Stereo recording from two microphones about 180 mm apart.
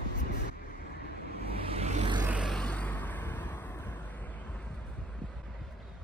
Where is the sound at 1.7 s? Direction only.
35° right (ahead or behind).